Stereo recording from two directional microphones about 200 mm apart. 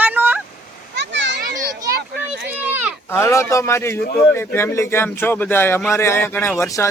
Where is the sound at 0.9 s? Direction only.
65° right (ahead or behind).